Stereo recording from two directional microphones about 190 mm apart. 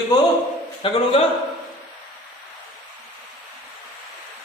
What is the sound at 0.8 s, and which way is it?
Speech, 25° left (ahead or behind).